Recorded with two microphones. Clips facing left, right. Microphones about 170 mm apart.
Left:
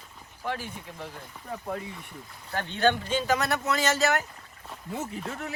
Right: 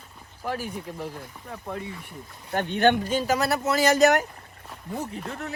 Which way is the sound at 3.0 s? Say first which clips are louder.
Right 2 dB; 40° right (ahead or behind).